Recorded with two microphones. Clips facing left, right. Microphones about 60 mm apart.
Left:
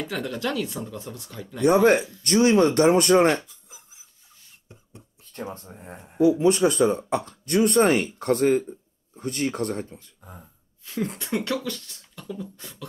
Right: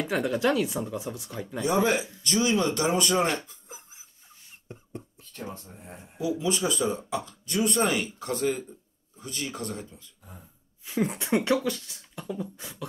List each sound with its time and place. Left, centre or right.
0.0 s speech: centre
1.6 s speech: left
3.4 s a sound: right
4.7 s beatboxing: right
5.3 s speech: left
10.9 s speech: centre